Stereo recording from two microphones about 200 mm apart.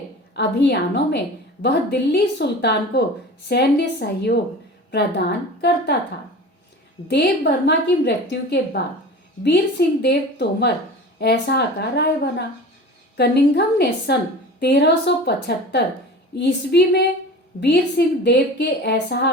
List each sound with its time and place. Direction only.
0.3 s a woman's voice: 60° left (ahead or behind)
7.1 s a woman's voice: 55° left (ahead or behind)